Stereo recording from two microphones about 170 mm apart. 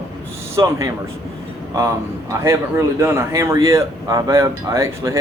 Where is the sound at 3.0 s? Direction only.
15° right (ahead or behind).